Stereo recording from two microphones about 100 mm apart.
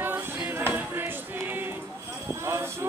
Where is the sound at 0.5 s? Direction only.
20° right (ahead or behind).